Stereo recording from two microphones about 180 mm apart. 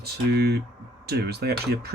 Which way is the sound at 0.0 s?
65° right (ahead or behind).